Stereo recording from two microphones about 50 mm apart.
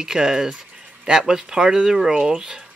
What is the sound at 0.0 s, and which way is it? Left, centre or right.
Speech, centre.